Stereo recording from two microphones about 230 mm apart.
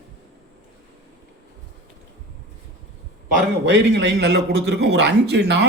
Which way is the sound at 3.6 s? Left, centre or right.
Right.